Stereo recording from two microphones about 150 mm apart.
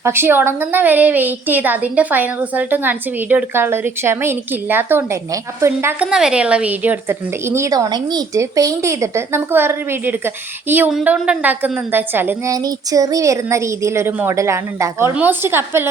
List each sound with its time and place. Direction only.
0.0 s a woman's voice: 15° right (ahead or behind)
6.1 s a woman's voice: 5° right (ahead or behind)
12.6 s a woman's voice: 25° right (ahead or behind)